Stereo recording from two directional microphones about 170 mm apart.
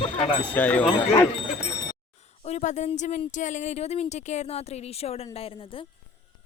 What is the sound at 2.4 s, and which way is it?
Speech, 45° left (ahead or behind).